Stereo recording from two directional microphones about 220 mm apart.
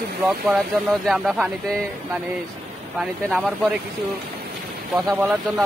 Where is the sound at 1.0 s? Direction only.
Centre (ahead or behind).